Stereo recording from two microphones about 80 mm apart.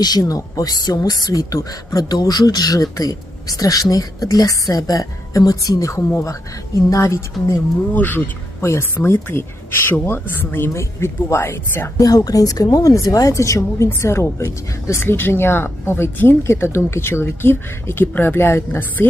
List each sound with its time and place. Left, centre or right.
0.0 s speech: left
2.0 s speech: left
7.9 s speech: left
8.6 s speech: left
11.9 s speech: left